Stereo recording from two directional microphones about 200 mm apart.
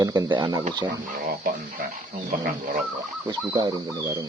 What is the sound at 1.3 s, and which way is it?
Speech, 45° right (ahead or behind).